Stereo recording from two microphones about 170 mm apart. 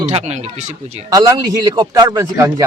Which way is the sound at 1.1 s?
20° right (ahead or behind).